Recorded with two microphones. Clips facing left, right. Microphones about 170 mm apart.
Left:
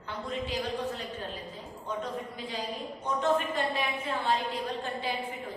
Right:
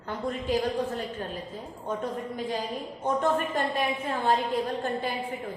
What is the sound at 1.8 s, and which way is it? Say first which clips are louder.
A woman's voice: right 3 dB; 50° right (ahead or behind).